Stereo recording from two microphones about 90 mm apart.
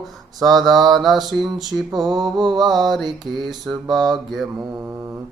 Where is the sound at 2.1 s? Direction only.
50° right (ahead or behind).